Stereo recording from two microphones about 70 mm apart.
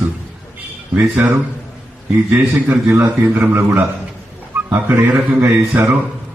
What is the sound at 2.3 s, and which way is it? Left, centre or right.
A man's voice, right.